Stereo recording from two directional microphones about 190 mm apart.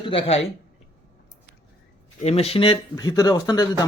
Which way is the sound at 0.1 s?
30° left (ahead or behind).